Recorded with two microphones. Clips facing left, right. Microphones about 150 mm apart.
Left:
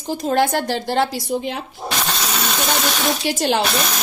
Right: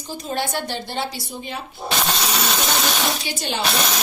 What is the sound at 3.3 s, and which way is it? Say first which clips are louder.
Speech: left 8 dB; 90° left.